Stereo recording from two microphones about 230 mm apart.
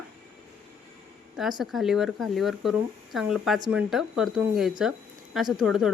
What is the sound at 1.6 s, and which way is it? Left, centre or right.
Speech, centre.